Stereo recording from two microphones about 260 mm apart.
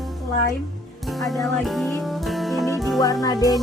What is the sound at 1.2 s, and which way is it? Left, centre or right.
Music, centre.